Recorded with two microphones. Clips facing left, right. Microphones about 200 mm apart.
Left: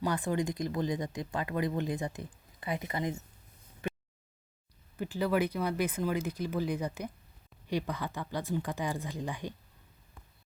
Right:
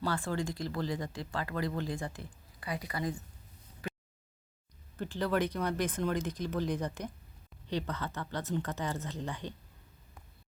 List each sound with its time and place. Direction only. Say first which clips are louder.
0.0 s speech: left 3 dB; 20° left (ahead or behind)
3.8 s a sound: left 4 dB; 25° left (ahead or behind)
4.9 s speech: left 2 dB; 10° left (ahead or behind)